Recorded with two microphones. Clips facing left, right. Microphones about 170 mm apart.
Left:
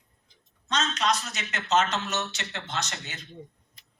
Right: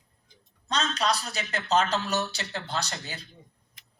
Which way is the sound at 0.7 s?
35° right (ahead or behind).